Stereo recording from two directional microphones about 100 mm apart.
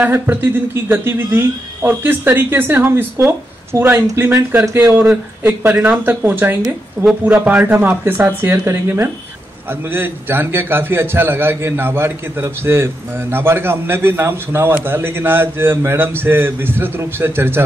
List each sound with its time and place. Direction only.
0.0 s a man's voice: 20° right (ahead or behind)